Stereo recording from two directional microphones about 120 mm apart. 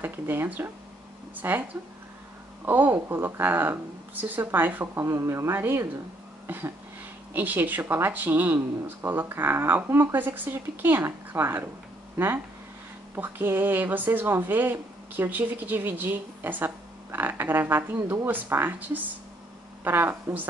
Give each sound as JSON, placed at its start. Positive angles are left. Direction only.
{"t": 0.0, "sound": "a woman's voice", "side_deg": -15}
{"t": 6.4, "sound": "a sound", "side_deg": -20}
{"t": 7.3, "sound": "a woman's voice", "side_deg": -15}